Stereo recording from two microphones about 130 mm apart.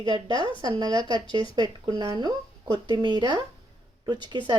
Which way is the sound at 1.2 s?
40° left (ahead or behind).